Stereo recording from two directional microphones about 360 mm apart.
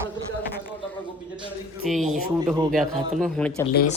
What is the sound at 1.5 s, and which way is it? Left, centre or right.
A woman's voice, centre.